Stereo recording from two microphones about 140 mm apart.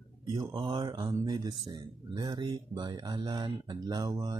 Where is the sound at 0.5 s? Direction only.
40° right (ahead or behind).